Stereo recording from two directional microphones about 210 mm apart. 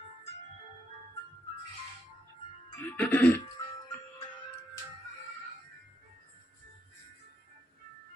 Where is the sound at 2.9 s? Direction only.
10° left (ahead or behind).